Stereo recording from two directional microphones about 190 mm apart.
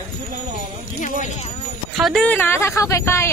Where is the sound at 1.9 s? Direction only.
Centre (ahead or behind).